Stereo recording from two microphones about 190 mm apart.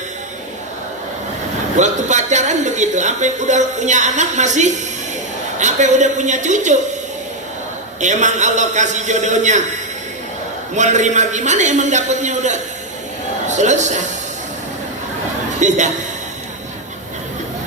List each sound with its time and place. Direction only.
1.7 s a woman's voice: 40° right (ahead or behind)
8.0 s a woman's voice: 40° right (ahead or behind)
10.8 s a woman's voice: 40° right (ahead or behind)
15.6 s a woman's voice: 40° right (ahead or behind)